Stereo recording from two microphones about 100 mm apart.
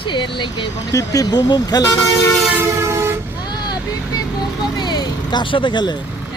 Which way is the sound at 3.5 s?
45° left (ahead or behind).